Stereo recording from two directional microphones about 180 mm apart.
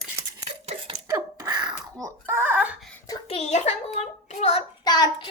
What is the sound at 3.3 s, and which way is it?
A child's voice, 35° left (ahead or behind).